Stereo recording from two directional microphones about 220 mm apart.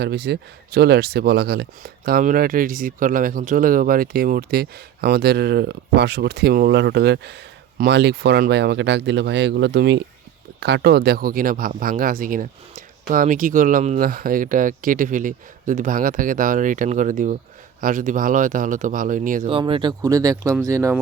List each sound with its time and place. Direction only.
0.0 s speech: 50° right (ahead or behind)
19.5 s speech: 25° right (ahead or behind)